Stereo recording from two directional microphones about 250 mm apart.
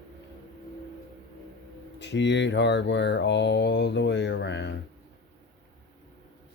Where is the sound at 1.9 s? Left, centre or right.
Left.